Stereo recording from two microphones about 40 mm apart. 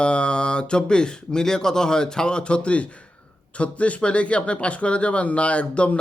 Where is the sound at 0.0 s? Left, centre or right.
Left.